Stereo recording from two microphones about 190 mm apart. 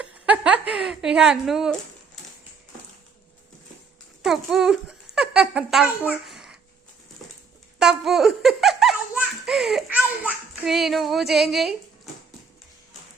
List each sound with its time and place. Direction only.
0.0 s a sound: 5° right (ahead or behind)
0.7 s a woman's voice: 5° right (ahead or behind)
4.2 s speech: centre (ahead or behind)
7.8 s a child's voice: centre (ahead or behind)